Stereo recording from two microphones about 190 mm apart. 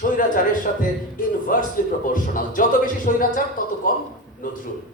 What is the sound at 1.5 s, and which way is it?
A man's voice, 45° left (ahead or behind).